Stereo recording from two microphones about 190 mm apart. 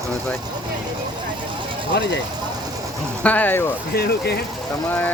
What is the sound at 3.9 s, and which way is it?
Speech, 55° left (ahead or behind).